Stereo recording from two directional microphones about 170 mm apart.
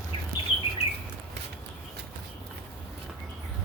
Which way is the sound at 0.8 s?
75° right (ahead or behind).